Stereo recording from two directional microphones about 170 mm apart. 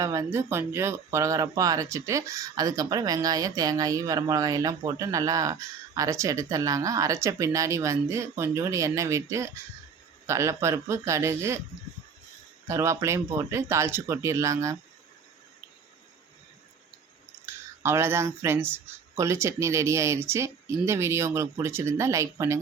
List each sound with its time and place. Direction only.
0.0 s speech: 15° right (ahead or behind)
12.6 s speech: 15° right (ahead or behind)
17.4 s speech: 15° right (ahead or behind)